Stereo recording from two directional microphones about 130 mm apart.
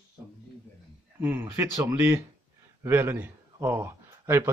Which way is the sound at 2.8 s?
20° right (ahead or behind).